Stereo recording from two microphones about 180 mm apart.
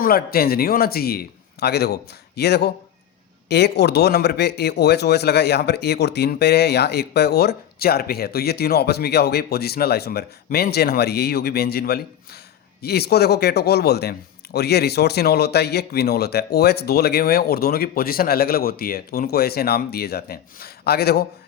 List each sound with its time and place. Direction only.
0.0 s speech: 55° left (ahead or behind)